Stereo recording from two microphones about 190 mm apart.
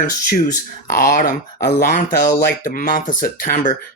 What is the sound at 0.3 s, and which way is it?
Speech, 40° left (ahead or behind).